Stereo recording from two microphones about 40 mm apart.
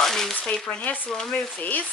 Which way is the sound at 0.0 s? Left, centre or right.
Centre.